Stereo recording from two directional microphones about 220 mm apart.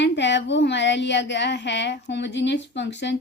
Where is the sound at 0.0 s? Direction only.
55° left (ahead or behind).